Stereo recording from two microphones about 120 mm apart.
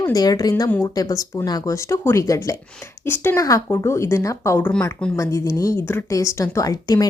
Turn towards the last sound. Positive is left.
turn(degrees=30)  # may be behind; listen again after turning